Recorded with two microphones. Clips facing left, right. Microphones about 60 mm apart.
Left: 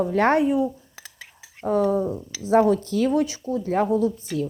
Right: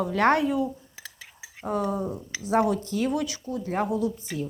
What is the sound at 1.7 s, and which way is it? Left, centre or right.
A woman's voice, left.